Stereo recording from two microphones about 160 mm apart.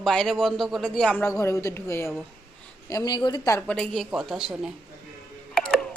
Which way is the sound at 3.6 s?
5° left (ahead or behind).